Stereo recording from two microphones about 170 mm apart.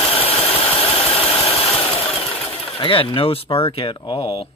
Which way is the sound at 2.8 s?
30° left (ahead or behind).